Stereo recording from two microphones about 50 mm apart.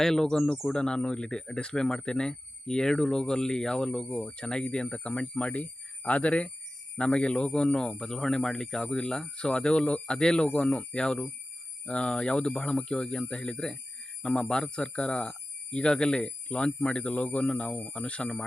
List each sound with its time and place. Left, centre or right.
0.0 s speech: centre